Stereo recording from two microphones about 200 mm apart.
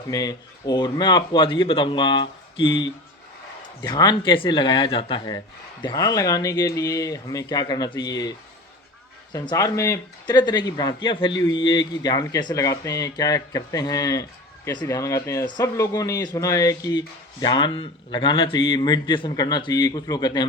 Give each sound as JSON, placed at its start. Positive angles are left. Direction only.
{"t": 0.1, "sound": "a man's voice", "side_deg": 20}